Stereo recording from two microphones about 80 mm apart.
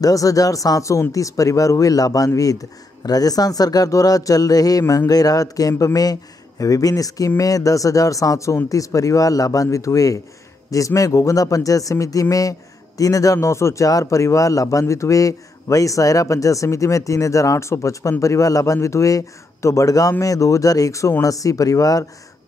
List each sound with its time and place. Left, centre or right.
0.0 s speech: left